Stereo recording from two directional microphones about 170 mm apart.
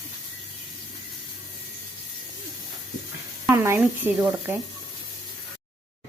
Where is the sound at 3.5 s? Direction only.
15° right (ahead or behind).